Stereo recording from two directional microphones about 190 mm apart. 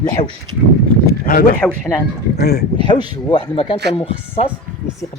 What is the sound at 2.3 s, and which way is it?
Speech, 55° left (ahead or behind).